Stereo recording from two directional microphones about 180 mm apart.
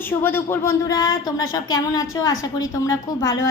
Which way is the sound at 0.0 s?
10° left (ahead or behind).